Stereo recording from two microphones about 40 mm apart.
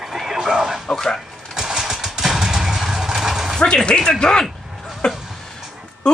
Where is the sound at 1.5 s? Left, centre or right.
Centre.